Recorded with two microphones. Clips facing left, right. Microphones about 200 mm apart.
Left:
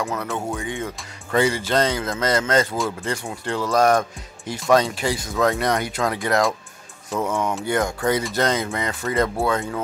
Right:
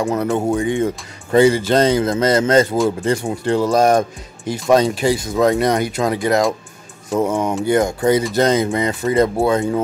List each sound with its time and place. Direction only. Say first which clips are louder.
0.0 s speech: right 8 dB; 30° right (ahead or behind)